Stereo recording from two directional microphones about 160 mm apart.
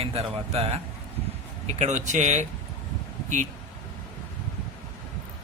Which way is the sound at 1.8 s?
45° right (ahead or behind).